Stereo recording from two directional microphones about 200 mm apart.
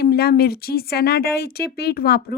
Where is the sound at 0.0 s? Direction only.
50° left (ahead or behind).